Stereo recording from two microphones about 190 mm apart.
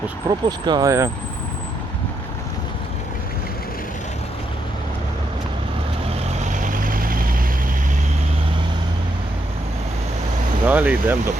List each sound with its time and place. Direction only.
0.3 s speech: 20° right (ahead or behind)
6.2 s vehicle: 45° right (ahead or behind)
10.7 s speech: 10° right (ahead or behind)